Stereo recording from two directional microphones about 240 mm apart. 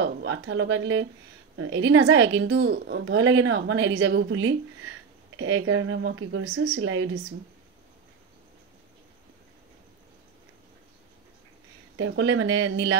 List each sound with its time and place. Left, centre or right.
0.0 s a woman's voice: right
12.0 s a woman's voice: right